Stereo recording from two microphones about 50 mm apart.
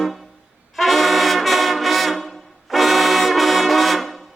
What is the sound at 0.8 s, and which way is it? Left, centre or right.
Brass instrument, centre.